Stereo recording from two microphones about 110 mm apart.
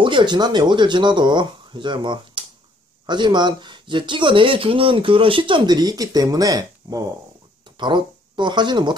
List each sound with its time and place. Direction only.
0.0 s speech: 45° right (ahead or behind)
7.7 s speech: 45° right (ahead or behind)